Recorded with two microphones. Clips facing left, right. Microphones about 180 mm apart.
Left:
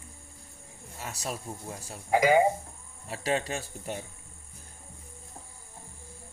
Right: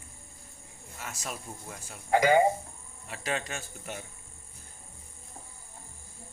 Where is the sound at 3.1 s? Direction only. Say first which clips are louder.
Left 4 dB; 35° left (ahead or behind).